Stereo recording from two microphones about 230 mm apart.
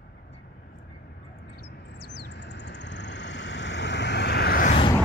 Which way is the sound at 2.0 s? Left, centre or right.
Right.